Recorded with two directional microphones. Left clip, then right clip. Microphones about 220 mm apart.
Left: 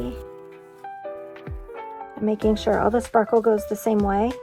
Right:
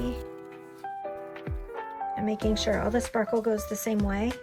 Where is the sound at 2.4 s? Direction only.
25° left (ahead or behind).